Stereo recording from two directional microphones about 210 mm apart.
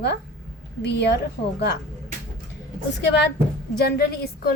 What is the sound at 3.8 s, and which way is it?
Speech, 50° left (ahead or behind).